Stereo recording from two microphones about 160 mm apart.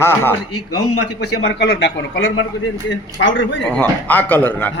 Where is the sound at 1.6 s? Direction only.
90° left.